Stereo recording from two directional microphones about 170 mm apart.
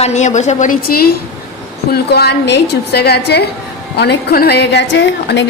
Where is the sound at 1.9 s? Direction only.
70° left (ahead or behind).